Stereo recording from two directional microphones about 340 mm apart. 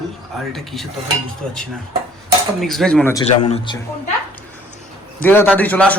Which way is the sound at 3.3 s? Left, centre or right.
Centre.